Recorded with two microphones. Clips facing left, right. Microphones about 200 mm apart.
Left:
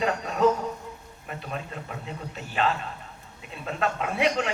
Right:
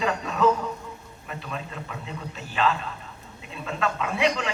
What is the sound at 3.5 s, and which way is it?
Speech, 45° left (ahead or behind).